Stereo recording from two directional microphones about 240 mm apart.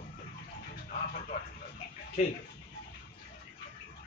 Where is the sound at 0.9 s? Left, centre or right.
Left.